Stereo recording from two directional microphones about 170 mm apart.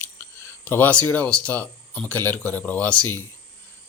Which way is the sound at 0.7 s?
10° left (ahead or behind).